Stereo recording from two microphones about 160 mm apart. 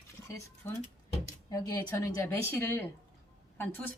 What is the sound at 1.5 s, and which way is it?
A woman's voice, 20° left (ahead or behind).